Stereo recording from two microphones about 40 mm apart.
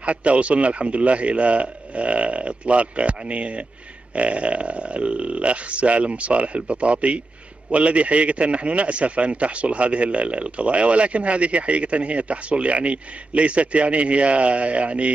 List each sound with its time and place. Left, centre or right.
0.0 s speech: right